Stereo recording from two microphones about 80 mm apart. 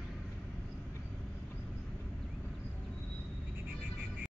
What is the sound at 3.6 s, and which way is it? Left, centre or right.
Neigh, centre.